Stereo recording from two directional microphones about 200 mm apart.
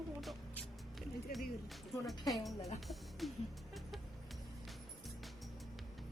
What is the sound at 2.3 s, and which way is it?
A woman's voice, centre (ahead or behind).